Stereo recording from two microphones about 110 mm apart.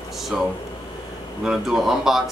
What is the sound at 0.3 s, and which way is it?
Speech, centre (ahead or behind).